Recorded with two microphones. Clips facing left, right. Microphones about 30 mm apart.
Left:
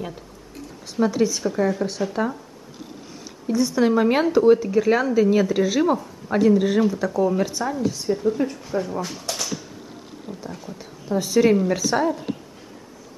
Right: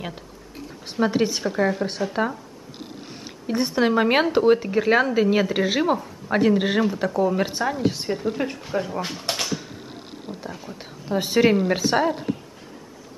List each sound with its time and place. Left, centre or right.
1.0 s speech: right
2.0 s speech: right
3.3 s speech: right
9.2 s a sound: right
10.5 s speech: centre
10.8 s a woman's voice: right